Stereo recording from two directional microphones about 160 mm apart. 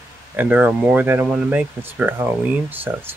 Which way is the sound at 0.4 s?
10° right (ahead or behind).